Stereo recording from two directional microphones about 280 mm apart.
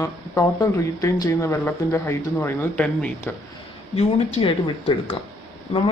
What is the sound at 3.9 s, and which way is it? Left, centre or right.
Speech, left.